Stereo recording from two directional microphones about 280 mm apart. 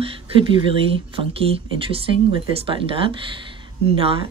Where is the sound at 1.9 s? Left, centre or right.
Centre.